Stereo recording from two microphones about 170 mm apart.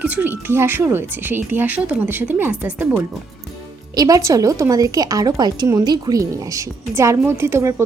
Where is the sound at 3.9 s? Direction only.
20° right (ahead or behind).